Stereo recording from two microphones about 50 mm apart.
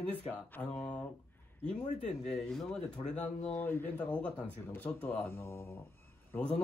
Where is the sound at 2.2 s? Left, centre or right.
Centre.